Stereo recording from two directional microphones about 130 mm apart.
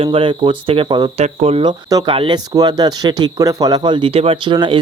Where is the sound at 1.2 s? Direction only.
55° right (ahead or behind).